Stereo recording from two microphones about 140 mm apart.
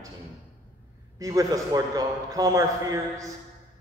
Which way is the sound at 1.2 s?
25° right (ahead or behind).